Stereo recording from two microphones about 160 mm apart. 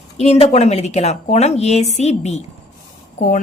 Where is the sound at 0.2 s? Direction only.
45° left (ahead or behind).